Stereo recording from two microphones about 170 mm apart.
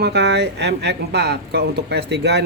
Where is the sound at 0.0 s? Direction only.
85° right.